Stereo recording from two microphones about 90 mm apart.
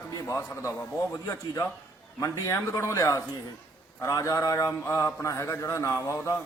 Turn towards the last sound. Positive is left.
turn(degrees=35)  # may be behind; listen again after turning